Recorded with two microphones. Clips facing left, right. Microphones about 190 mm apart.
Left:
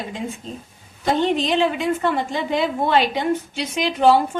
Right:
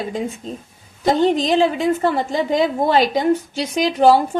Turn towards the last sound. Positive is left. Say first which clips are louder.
# right 2 dB
turn(degrees=-40)  # may be behind; listen again after turning